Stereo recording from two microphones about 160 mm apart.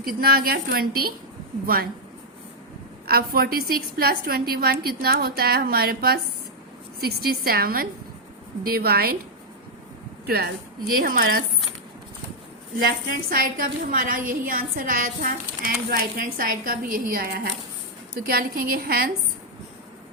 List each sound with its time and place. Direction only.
0.0 s a woman's voice: 70° right (ahead or behind)
3.1 s a woman's voice: 70° right (ahead or behind)
10.2 s a woman's voice: 75° right (ahead or behind)
10.9 s a woman's voice: 65° right (ahead or behind)
13.3 s a woman's voice: 60° right (ahead or behind)